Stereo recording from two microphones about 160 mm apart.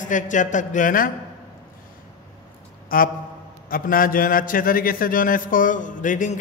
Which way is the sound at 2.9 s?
65° left (ahead or behind).